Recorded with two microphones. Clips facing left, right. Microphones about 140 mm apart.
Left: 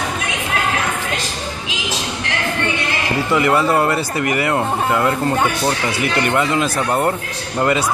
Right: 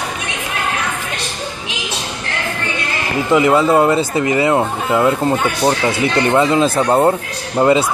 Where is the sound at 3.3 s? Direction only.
20° right (ahead or behind).